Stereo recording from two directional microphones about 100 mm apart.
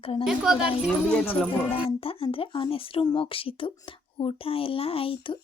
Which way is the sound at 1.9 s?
70° left (ahead or behind).